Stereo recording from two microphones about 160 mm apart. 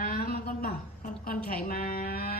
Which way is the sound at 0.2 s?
70° left (ahead or behind).